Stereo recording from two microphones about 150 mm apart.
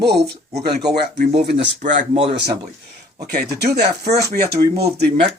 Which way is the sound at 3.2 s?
90° right.